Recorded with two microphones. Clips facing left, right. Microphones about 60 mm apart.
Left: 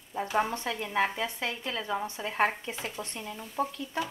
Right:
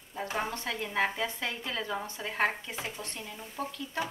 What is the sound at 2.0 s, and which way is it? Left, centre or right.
A woman's voice, centre.